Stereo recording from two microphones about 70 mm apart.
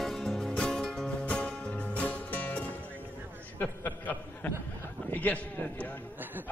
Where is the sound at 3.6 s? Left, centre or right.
Left.